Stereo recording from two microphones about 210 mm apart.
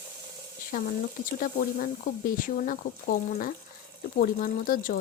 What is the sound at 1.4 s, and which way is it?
A woman's voice, 40° left (ahead or behind).